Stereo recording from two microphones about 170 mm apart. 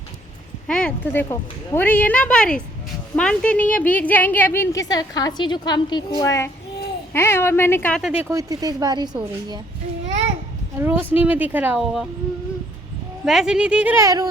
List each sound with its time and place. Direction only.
0.7 s a woman's voice: 5° left (ahead or behind)
8.0 s speech: 5° right (ahead or behind)
8.3 s speech: 20° right (ahead or behind)
10.8 s speech: 15° right (ahead or behind)
13.2 s speech: 5° right (ahead or behind); by 14.3 s 20° right (ahead or behind)